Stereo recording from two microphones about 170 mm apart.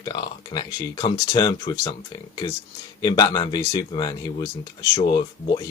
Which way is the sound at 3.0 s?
25° left (ahead or behind).